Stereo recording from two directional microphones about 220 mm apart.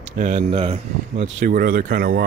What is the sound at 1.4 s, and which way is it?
Speech, 40° right (ahead or behind).